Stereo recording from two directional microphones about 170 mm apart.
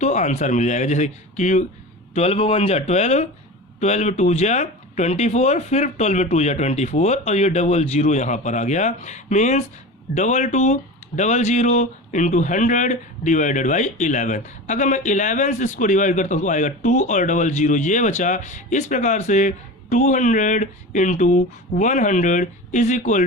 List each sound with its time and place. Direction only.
0.0 s speech: 45° left (ahead or behind)